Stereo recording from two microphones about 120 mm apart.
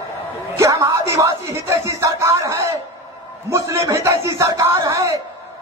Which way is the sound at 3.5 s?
25° right (ahead or behind).